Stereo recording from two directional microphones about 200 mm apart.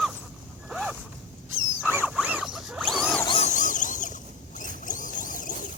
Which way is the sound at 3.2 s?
30° left (ahead or behind).